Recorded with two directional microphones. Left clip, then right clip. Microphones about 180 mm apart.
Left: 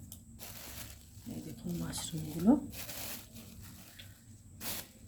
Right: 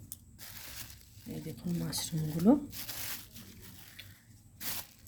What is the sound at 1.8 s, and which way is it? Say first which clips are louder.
Speech: right 4 dB; 35° right (ahead or behind).